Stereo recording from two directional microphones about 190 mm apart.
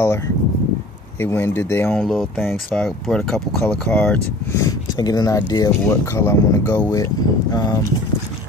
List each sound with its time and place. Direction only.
1.2 s speech: 10° left (ahead or behind)
4.6 s speech: 20° left (ahead or behind)